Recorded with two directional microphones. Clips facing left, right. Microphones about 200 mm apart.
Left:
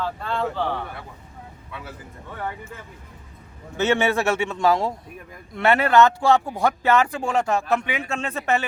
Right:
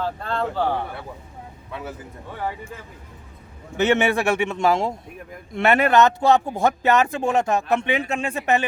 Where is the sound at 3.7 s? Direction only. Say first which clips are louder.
Right 2 dB; 15° right (ahead or behind).